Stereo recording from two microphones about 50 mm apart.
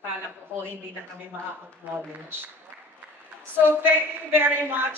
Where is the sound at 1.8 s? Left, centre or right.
Right.